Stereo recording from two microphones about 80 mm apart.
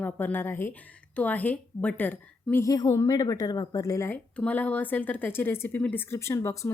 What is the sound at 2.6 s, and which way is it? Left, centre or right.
A woman's voice, left.